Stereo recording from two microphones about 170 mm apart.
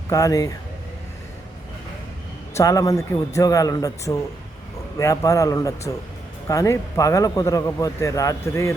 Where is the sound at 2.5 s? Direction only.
20° left (ahead or behind).